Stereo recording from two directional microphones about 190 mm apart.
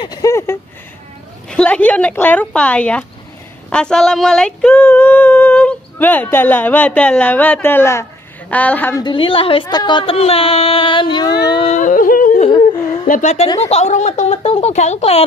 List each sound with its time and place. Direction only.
0.0 s speech: 20° left (ahead or behind)
3.7 s female singing: 5° left (ahead or behind)
9.0 s speech: 25° left (ahead or behind)
11.7 s yodeling: 45° left (ahead or behind)
13.1 s speech: 40° left (ahead or behind)